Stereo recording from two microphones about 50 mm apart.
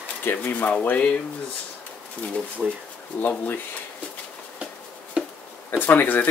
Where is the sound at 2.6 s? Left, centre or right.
Centre.